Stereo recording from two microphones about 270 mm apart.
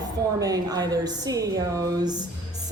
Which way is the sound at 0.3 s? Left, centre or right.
Centre.